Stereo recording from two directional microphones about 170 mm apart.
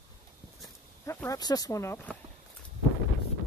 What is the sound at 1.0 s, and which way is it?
Speech, 20° left (ahead or behind).